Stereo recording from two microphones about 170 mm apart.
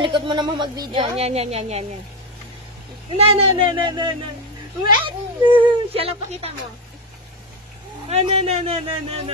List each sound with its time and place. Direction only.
0.0 s speech: 30° right (ahead or behind)
1.2 s a man's voice: 40° right (ahead or behind)
3.2 s a man's voice: 35° right (ahead or behind)
8.1 s a man's voice: 35° right (ahead or behind)